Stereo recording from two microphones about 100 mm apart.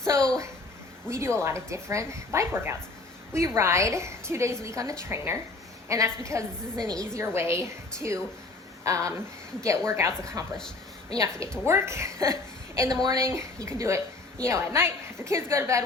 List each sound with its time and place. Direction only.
1.4 s a woman's voice: 30° right (ahead or behind)
6.7 s a woman's voice: 10° left (ahead or behind)
7.1 s a woman's voice: 30° right (ahead or behind)
10.4 s a woman's voice: 40° right (ahead or behind)
13.2 s a woman's voice: 30° right (ahead or behind)